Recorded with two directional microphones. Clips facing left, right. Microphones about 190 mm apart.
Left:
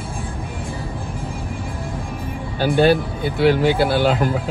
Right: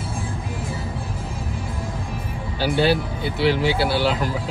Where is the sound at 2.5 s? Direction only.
50° left (ahead or behind).